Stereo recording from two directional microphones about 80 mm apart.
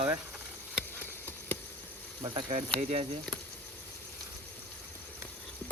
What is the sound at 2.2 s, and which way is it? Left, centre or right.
Speech, right.